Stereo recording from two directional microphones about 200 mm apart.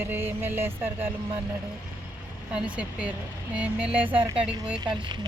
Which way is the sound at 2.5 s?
5° right (ahead or behind).